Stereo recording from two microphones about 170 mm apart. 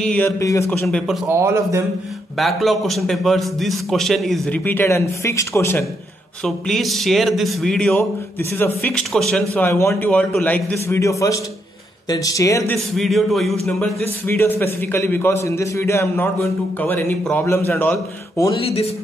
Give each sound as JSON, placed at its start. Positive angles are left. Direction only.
{"t": 0.0, "sound": "a man's voice", "side_deg": 10}
{"t": 0.4, "sound": "speech", "side_deg": 20}
{"t": 0.7, "sound": "a man's voice", "side_deg": 5}
{"t": 1.2, "sound": "a man's voice", "side_deg": -15}
{"t": 2.3, "sound": "a man's voice", "side_deg": 0}
{"t": 4.6, "sound": "a man's voice", "side_deg": 15}
{"t": 6.4, "sound": "a man's voice", "side_deg": 0}
{"t": 7.9, "sound": "a man's voice", "side_deg": 15}
{"t": 9.5, "sound": "a man's voice", "side_deg": 15}
{"t": 12.9, "sound": "a man's voice", "side_deg": 0}
{"t": 18.6, "sound": "speech", "side_deg": 35}